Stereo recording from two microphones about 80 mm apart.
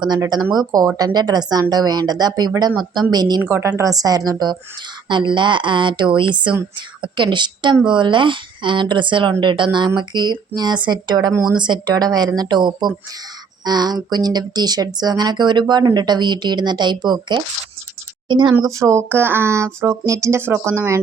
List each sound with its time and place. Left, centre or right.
0.5 s a woman's voice: right
3.4 s a woman's voice: right
5.0 s a woman's voice: right
18.6 s speech: right
19.0 s speech: right